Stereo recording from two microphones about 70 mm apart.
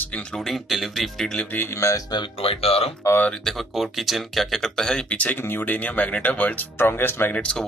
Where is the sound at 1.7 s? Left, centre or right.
Left.